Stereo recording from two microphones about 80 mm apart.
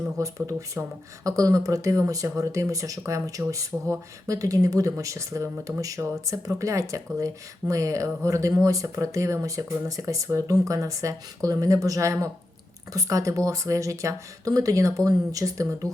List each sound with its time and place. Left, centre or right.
0.2 s speech: right